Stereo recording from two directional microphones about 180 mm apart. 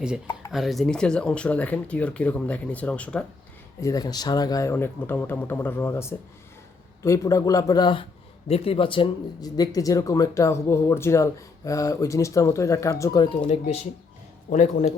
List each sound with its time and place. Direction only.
0.5 s speech: centre (ahead or behind)
3.8 s speech: 20° left (ahead or behind)
13.5 s a man's voice: 35° left (ahead or behind)